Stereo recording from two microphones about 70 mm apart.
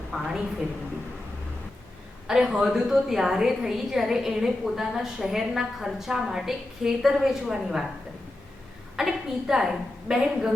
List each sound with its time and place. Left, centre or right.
0.1 s a woman's voice: centre
2.2 s a woman's voice: centre
9.0 s a woman's voice: centre